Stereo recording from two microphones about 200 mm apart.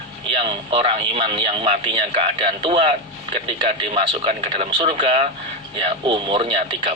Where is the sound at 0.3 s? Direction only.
25° right (ahead or behind).